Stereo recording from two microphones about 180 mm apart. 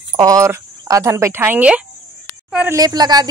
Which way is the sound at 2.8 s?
20° right (ahead or behind).